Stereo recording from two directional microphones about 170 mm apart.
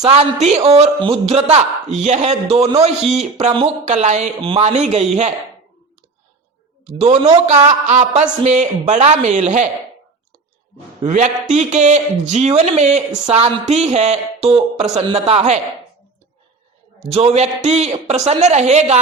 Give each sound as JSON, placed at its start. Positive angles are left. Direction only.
{"t": 0.1, "sound": "speech", "side_deg": -40}
{"t": 6.8, "sound": "speech", "side_deg": -35}
{"t": 11.0, "sound": "speech", "side_deg": -45}
{"t": 17.0, "sound": "speech", "side_deg": -35}